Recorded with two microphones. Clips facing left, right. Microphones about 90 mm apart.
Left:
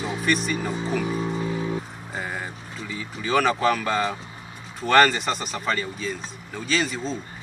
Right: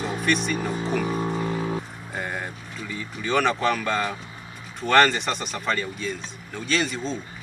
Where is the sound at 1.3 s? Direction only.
45° right (ahead or behind).